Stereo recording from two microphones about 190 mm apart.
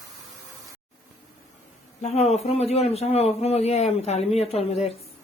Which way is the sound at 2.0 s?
35° left (ahead or behind).